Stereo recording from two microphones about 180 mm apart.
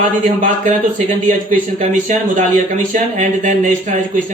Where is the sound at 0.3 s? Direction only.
45° right (ahead or behind).